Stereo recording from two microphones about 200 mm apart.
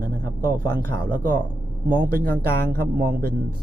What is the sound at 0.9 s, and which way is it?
A man's voice, 45° right (ahead or behind).